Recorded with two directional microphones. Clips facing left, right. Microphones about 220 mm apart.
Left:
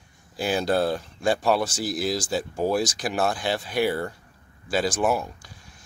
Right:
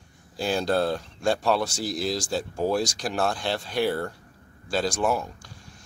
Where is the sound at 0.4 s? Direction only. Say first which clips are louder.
Left 1 dB; 5° left (ahead or behind).